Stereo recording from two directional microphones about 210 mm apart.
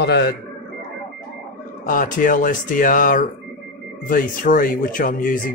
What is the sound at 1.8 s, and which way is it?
Speech, 40° left (ahead or behind).